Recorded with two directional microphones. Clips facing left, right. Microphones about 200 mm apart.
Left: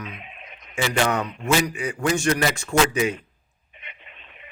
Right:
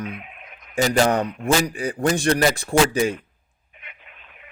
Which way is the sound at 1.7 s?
35° right (ahead or behind).